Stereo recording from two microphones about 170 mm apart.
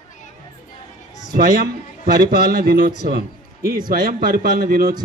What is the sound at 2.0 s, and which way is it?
A man's voice, 60° right (ahead or behind).